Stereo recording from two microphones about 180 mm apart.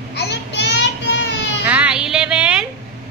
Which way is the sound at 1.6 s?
10° right (ahead or behind).